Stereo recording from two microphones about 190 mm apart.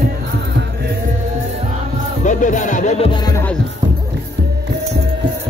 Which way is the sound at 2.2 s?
40° left (ahead or behind).